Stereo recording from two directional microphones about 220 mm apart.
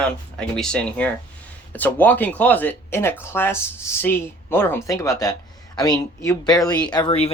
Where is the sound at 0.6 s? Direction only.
5° left (ahead or behind).